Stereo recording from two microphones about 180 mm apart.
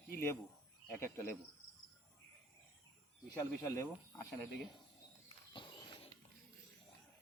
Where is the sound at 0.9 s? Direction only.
15° left (ahead or behind).